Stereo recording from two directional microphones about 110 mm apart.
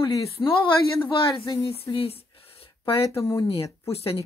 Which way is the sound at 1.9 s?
60° left (ahead or behind).